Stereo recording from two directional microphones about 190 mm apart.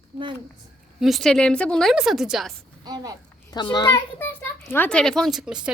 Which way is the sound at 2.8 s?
20° right (ahead or behind).